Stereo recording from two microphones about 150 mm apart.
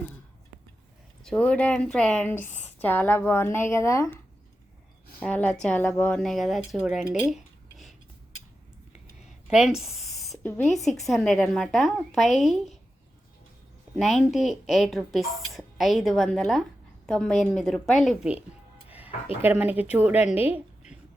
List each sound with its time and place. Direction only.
1.2 s speech: 5° left (ahead or behind)
5.2 s a woman's voice: 10° left (ahead or behind)
6.8 s cutlery: 5° right (ahead or behind)
9.5 s a woman's voice: 5° right (ahead or behind)
13.9 s a woman's voice: centre (ahead or behind)
18.9 s music: 10° right (ahead or behind)
19.4 s speech: 10° right (ahead or behind)
20.5 s a sound: 50° left (ahead or behind)